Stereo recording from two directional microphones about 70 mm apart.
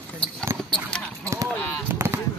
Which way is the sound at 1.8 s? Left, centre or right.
Right.